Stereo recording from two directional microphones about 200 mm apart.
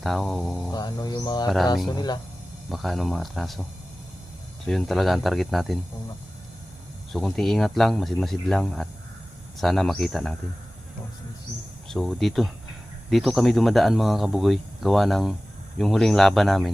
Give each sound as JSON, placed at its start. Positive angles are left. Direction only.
{"t": 0.0, "sound": "speech", "side_deg": 0}
{"t": 0.7, "sound": "speech", "side_deg": 20}
{"t": 2.6, "sound": "speech", "side_deg": 0}
{"t": 7.1, "sound": "speech", "side_deg": 0}
{"t": 11.9, "sound": "speech", "side_deg": 0}